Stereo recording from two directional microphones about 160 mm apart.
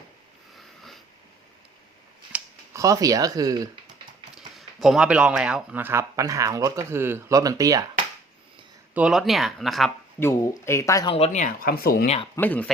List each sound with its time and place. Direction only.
0.5 s a sound: centre (ahead or behind)
2.7 s speech: 20° right (ahead or behind)
4.4 s speech: centre (ahead or behind); by 7.9 s 20° right (ahead or behind)
9.0 s speech: 5° right (ahead or behind)
10.2 s speech: 15° left (ahead or behind)
11.1 s speech: 45° left (ahead or behind); by 12.0 s 70° left (ahead or behind)
12.0 s speech: 40° left (ahead or behind)
12.4 s speech: 10° left (ahead or behind)